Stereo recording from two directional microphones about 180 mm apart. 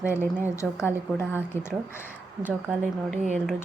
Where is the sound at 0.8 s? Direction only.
10° left (ahead or behind).